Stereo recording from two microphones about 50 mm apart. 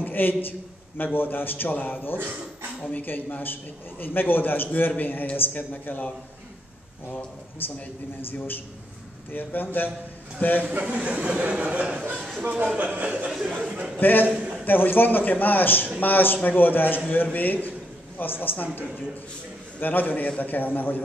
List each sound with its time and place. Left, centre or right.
0.0 s a man's voice: left
8.3 s a man's voice: left
10.6 s a man's voice: right
13.3 s a sound: centre
13.6 s speech: centre
13.9 s a man's voice: left
14.2 s a man's voice: right
14.6 s a man's voice: left